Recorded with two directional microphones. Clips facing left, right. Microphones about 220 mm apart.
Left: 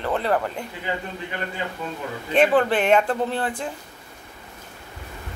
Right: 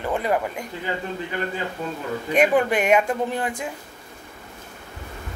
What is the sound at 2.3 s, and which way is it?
A woman's voice, 10° right (ahead or behind).